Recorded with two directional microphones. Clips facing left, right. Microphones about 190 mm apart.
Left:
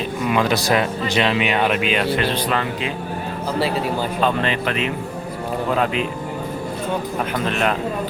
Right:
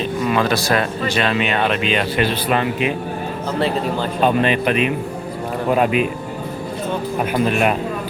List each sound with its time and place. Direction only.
0.3 s speech: 15° left (ahead or behind)
2.1 s speech: 15° right (ahead or behind)
4.2 s speech: 15° right (ahead or behind)
7.3 s speech: 10° right (ahead or behind)